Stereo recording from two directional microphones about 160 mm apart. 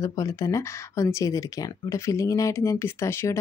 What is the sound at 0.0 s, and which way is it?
Speech, 20° left (ahead or behind).